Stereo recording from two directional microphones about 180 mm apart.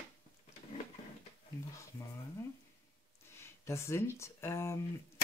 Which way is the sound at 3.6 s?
15° left (ahead or behind).